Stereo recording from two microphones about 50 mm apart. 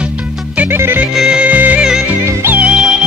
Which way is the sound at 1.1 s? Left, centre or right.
Centre.